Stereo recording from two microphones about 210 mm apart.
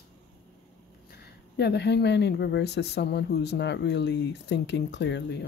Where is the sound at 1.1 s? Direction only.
50° left (ahead or behind).